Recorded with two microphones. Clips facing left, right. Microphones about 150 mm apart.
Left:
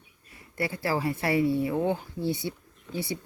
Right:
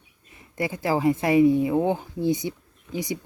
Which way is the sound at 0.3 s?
20° right (ahead or behind).